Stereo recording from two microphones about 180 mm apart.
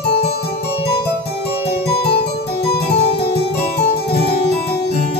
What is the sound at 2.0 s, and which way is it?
Harpsichord, 65° left (ahead or behind).